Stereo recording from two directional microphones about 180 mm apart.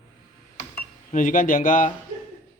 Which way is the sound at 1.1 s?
50° left (ahead or behind).